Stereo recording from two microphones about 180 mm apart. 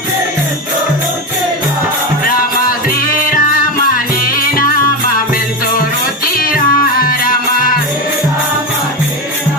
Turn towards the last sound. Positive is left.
turn(degrees=50)  # may be behind; listen again after turning